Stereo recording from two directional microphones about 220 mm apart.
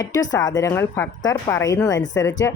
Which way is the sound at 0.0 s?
15° left (ahead or behind).